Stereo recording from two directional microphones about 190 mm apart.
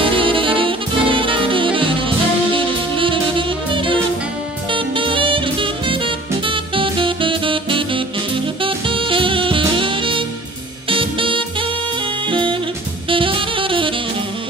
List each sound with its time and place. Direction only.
0.2 s saxophone: 25° right (ahead or behind)
10.9 s music: 25° right (ahead or behind)
12.3 s drum kit: 25° right (ahead or behind)
13.1 s saxophone: 25° right (ahead or behind)